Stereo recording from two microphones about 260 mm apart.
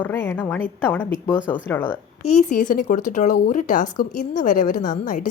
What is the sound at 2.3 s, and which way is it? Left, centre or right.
A woman's voice, left.